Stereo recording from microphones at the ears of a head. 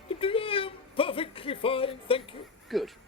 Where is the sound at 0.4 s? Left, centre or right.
Left.